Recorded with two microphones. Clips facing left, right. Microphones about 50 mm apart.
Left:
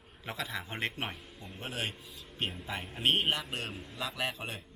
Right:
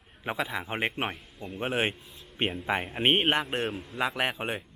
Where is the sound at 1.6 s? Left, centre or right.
Right.